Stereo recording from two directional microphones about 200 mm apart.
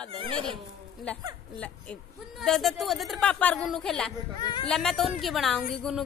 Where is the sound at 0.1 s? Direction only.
25° right (ahead or behind).